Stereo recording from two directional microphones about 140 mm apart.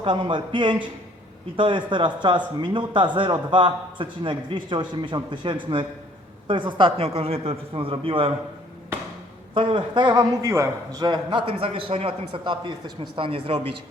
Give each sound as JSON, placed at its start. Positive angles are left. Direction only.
{"t": 0.0, "sound": "a man's voice", "side_deg": -35}
{"t": 9.6, "sound": "a man's voice", "side_deg": -35}